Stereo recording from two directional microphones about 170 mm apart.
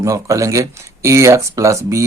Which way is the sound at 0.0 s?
20° right (ahead or behind).